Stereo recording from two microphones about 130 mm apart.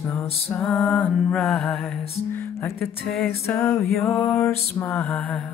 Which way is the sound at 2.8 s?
Centre (ahead or behind).